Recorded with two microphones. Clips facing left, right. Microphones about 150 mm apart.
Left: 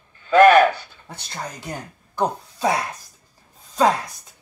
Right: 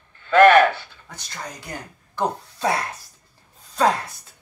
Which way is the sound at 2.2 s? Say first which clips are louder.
Left 2 dB; 15° left (ahead or behind).